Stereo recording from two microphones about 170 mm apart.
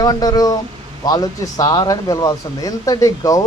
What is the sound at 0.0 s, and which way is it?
Speech, 20° left (ahead or behind).